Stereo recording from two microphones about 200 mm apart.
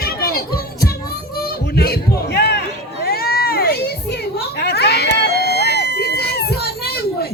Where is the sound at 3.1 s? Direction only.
50° left (ahead or behind).